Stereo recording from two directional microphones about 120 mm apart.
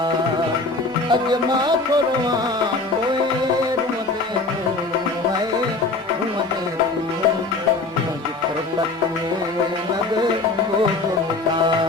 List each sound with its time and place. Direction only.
1.1 s music: 35° right (ahead or behind)